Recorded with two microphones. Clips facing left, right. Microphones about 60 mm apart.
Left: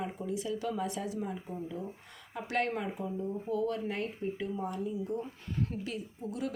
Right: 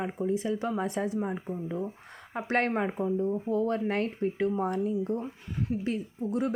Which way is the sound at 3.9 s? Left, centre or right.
Right.